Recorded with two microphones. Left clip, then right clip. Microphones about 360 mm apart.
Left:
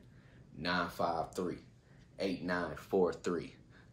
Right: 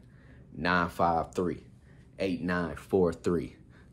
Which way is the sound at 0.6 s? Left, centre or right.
Centre.